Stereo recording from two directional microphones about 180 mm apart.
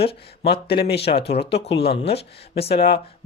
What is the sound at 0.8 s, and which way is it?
Speech, 65° left (ahead or behind).